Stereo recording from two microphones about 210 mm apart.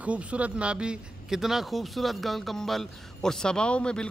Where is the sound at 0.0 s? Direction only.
5° right (ahead or behind).